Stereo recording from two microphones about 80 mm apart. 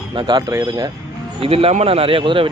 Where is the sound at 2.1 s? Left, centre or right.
Right.